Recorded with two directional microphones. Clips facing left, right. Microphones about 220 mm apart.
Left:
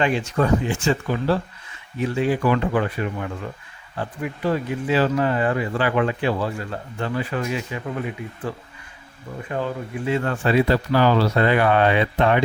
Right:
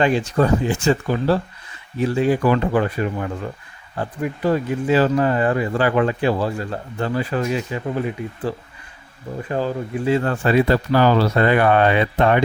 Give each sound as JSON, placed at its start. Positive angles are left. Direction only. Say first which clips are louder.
{"t": 0.0, "sound": "speech", "louder": "right 3 dB", "side_deg": -35}